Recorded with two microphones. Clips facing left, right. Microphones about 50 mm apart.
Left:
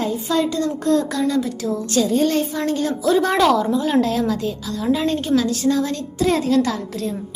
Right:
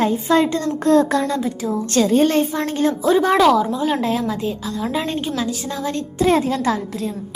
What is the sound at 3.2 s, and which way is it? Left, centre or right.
Speech, centre.